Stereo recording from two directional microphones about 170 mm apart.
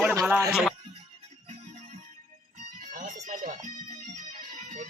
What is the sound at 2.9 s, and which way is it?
Music, 50° right (ahead or behind).